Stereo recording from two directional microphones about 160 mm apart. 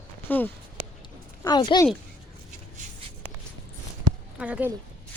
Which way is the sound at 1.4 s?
25° left (ahead or behind).